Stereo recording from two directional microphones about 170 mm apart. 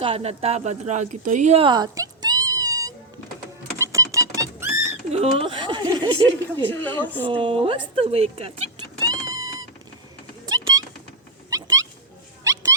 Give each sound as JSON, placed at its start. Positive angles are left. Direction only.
{"t": 0.0, "sound": "speech", "side_deg": -35}
{"t": 3.8, "sound": "rodents", "side_deg": -20}
{"t": 5.1, "sound": "a woman's voice", "side_deg": -35}
{"t": 6.4, "sound": "speech", "side_deg": 10}
{"t": 7.3, "sound": "a woman's voice", "side_deg": -30}
{"t": 9.2, "sound": "cat", "side_deg": -20}
{"t": 10.5, "sound": "a sound", "side_deg": -20}
{"t": 11.5, "sound": "cat", "side_deg": -20}